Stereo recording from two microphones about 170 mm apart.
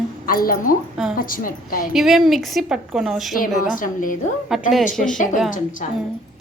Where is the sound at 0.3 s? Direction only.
60° left (ahead or behind).